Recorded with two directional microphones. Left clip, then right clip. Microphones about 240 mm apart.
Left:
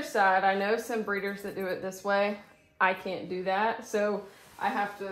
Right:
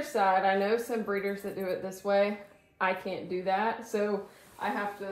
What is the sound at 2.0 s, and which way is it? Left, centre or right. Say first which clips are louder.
Speech: right 1 dB; left.